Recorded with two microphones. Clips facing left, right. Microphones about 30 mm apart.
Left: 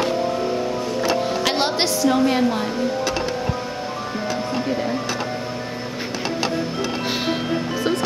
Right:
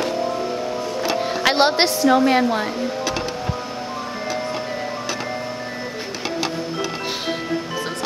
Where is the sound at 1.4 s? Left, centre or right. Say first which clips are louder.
Right 4 dB; centre.